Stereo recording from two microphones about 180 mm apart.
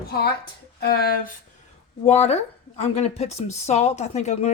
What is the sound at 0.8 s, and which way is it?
Speech, 60° left (ahead or behind).